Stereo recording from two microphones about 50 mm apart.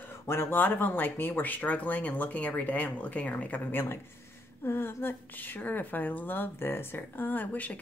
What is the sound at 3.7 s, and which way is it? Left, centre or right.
A woman's voice, left.